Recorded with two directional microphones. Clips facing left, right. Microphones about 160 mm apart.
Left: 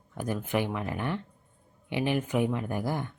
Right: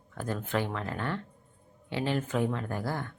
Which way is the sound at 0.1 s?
15° left (ahead or behind).